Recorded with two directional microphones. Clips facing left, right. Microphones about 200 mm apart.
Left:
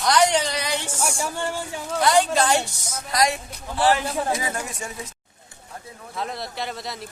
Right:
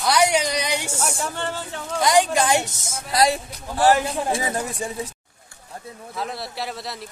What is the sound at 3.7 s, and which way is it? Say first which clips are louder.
Speech: right 3 dB; 45° right (ahead or behind).